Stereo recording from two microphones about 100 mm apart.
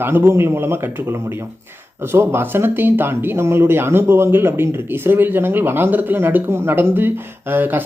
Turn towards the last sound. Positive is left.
turn(degrees=-20)  # may be behind; listen again after turning